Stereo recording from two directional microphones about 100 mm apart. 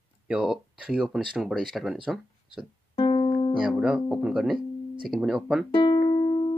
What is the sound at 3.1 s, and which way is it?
Music, 55° left (ahead or behind).